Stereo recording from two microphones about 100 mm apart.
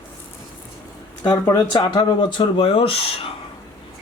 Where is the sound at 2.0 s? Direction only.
55° left (ahead or behind).